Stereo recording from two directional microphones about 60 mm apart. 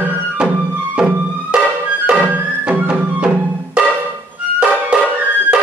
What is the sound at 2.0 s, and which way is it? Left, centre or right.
Music, right.